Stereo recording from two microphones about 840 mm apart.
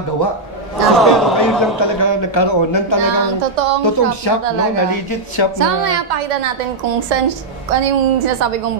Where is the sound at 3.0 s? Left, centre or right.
Right.